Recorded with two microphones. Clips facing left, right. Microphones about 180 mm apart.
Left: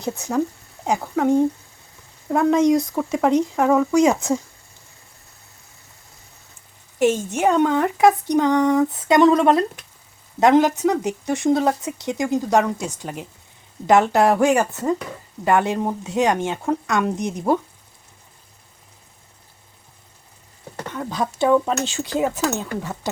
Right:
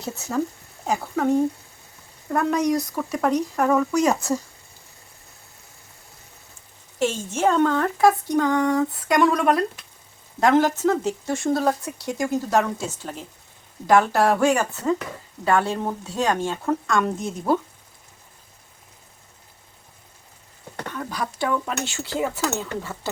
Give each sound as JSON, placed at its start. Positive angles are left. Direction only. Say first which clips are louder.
{"t": 0.9, "sound": "speech", "louder": "left 3 dB", "side_deg": 10}
{"t": 3.5, "sound": "speech", "louder": "left 3 dB", "side_deg": 5}
{"t": 7.0, "sound": "speech", "louder": "left 4 dB", "side_deg": 15}
{"t": 21.1, "sound": "speech", "louder": "left 8 dB", "side_deg": 20}